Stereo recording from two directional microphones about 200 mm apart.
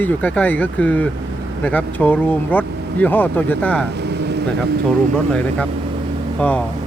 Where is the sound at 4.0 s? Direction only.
55° right (ahead or behind).